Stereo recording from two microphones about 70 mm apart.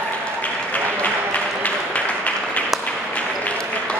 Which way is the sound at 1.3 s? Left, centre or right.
Centre.